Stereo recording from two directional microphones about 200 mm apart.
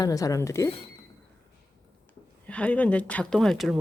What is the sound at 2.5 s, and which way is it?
A woman's voice, 5° left (ahead or behind).